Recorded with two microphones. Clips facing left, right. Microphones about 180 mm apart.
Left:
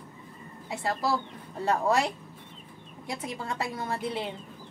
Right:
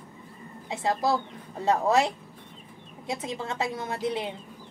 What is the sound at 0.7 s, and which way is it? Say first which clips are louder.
Speech: right 3 dB; 20° right (ahead or behind).